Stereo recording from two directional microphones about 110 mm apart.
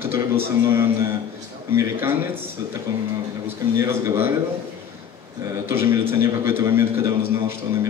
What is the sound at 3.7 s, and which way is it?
Speech, 20° right (ahead or behind).